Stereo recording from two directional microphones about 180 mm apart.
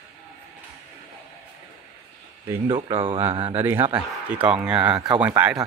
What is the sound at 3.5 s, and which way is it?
Speech, 10° right (ahead or behind).